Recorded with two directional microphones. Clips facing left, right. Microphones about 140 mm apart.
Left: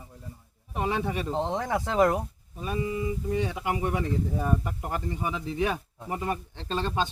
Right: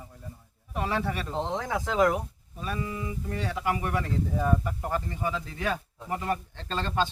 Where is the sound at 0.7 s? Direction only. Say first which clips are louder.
Left 1 dB; 20° left (ahead or behind).